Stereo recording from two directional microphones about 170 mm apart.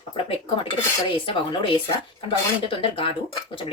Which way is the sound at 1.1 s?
30° left (ahead or behind).